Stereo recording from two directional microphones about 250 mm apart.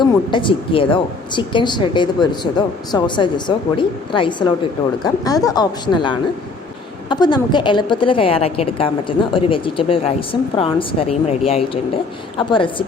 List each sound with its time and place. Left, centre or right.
0.0 s a woman's voice: centre